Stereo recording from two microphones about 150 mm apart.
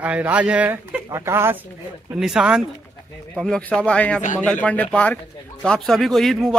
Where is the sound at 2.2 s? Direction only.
Centre (ahead or behind).